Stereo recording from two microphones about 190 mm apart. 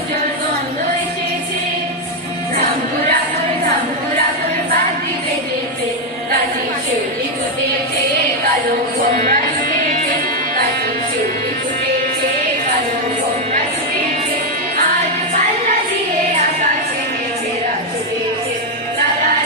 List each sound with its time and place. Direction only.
9.1 s music: 45° right (ahead or behind)